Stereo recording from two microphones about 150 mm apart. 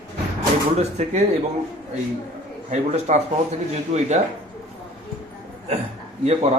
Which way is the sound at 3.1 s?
50° right (ahead or behind).